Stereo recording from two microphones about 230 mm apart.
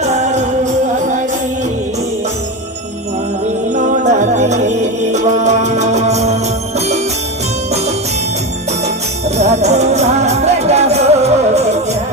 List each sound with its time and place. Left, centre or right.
0.0 s music: right
3.8 s music: right
9.4 s music: right